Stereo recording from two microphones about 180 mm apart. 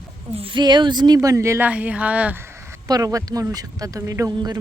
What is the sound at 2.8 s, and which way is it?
Speech, 20° right (ahead or behind).